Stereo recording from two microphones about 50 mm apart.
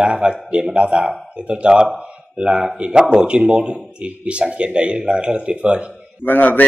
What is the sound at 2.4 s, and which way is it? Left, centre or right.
Speech, centre.